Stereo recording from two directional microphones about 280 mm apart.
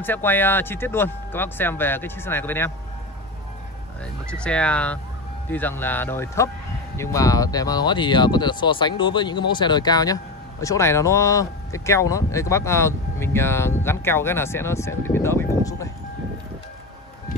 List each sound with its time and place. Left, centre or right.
0.0 s speech: centre
4.0 s speech: centre